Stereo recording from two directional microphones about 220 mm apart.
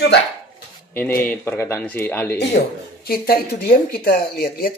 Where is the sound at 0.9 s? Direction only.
10° left (ahead or behind).